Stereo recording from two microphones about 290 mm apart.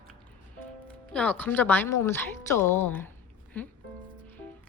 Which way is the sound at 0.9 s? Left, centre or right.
Centre.